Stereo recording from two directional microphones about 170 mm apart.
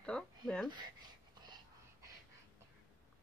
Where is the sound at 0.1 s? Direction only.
Centre (ahead or behind).